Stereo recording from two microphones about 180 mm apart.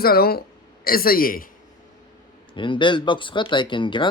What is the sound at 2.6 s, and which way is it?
Speech, 25° left (ahead or behind).